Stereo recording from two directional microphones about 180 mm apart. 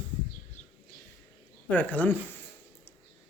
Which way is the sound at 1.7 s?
10° left (ahead or behind).